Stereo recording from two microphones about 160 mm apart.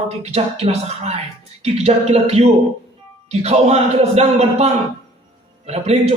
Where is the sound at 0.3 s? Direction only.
40° right (ahead or behind).